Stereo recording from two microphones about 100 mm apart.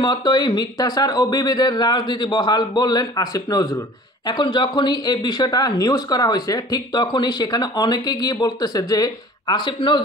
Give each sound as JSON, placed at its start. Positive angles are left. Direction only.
{"t": 0.0, "sound": "speech", "side_deg": 50}
{"t": 4.3, "sound": "speech", "side_deg": 50}